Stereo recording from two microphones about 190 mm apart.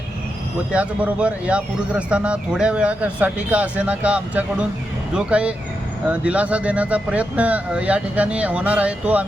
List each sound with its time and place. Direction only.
0.7 s a man's voice: 5° right (ahead or behind)